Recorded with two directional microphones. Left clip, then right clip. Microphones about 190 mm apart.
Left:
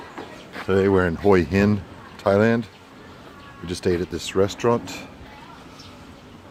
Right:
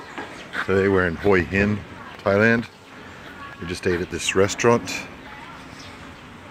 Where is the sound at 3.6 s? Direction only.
20° left (ahead or behind).